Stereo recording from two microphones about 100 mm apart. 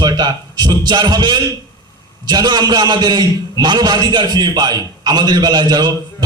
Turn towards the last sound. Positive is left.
turn(degrees=-45)  # may be behind; listen again after turning